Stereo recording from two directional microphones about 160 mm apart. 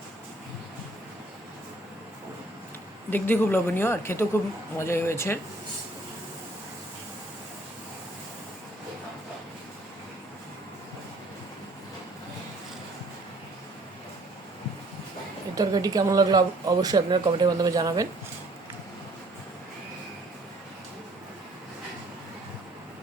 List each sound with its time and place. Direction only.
3.1 s a woman's voice: 10° left (ahead or behind)
15.5 s speech: 25° right (ahead or behind)